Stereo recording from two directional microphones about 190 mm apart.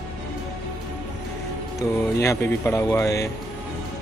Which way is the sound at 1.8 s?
15° left (ahead or behind).